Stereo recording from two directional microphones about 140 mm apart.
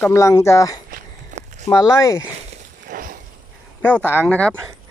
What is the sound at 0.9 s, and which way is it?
Walk, 55° right (ahead or behind).